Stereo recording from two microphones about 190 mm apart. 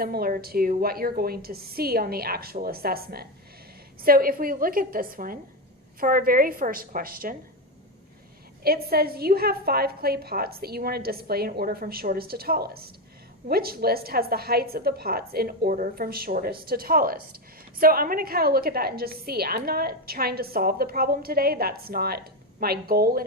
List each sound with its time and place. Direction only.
0.0 s a woman's voice: 50° right (ahead or behind)
8.6 s a woman's voice: 55° right (ahead or behind)